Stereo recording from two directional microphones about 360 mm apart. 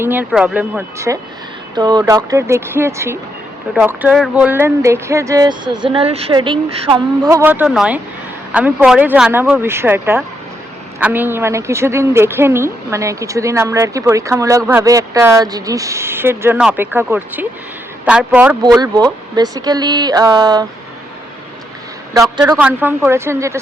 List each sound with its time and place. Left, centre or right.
0.0 s speech: centre
22.1 s speech: centre